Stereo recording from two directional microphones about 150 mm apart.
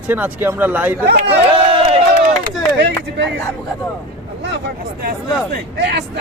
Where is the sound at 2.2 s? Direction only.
80° right.